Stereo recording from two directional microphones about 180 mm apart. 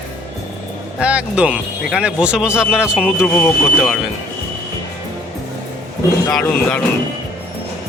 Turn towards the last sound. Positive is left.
turn(degrees=5)  # may be behind; listen again after turning